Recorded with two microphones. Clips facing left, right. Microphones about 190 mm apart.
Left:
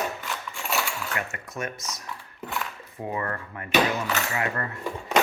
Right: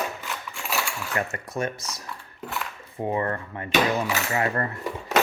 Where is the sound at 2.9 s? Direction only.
30° right (ahead or behind).